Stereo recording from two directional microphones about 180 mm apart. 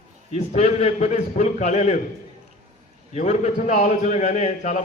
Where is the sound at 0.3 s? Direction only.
40° left (ahead or behind).